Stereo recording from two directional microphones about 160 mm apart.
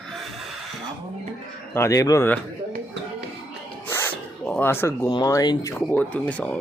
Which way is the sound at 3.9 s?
15° left (ahead or behind).